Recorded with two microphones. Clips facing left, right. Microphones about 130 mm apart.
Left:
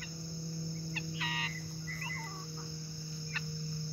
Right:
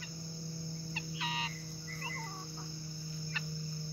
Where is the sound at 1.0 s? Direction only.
25° right (ahead or behind).